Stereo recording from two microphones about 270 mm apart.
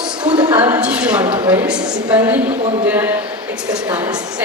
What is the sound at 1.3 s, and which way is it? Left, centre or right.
Speech, centre.